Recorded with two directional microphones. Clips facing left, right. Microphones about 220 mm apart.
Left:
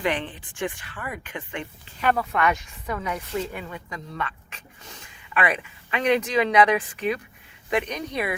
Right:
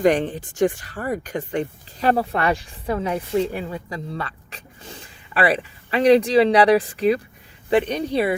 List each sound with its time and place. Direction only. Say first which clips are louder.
0.0 s speech: right 9 dB; 45° right (ahead or behind)